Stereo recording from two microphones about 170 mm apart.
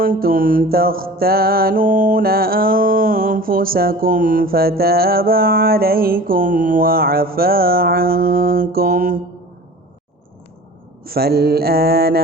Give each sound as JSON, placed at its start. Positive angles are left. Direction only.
{"t": 0.0, "sound": "mantra", "side_deg": -60}
{"t": 11.0, "sound": "mantra", "side_deg": -65}